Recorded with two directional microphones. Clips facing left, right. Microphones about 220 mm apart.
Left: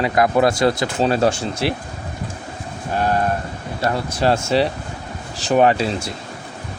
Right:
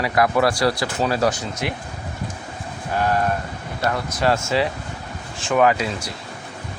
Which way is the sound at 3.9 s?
30° left (ahead or behind).